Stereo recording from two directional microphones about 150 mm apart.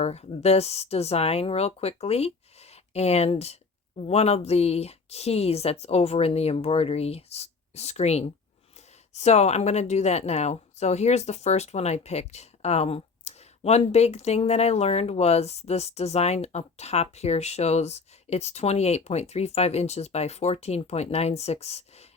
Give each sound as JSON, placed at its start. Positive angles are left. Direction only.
{"t": 0.0, "sound": "speech", "side_deg": 45}